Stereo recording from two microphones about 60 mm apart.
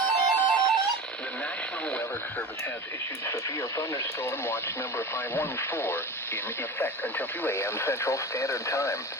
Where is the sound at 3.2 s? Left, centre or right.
Left.